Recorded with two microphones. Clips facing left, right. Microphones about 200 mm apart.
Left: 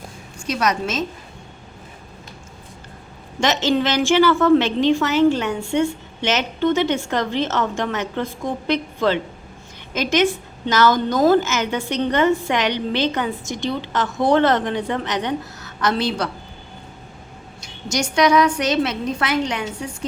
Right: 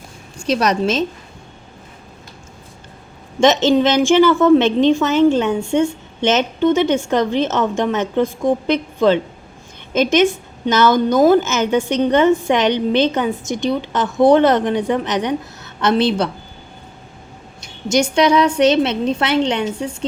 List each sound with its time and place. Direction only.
0.4 s a woman's voice: 35° right (ahead or behind)
3.8 s a woman's voice: 20° right (ahead or behind)
17.8 s a woman's voice: 25° right (ahead or behind)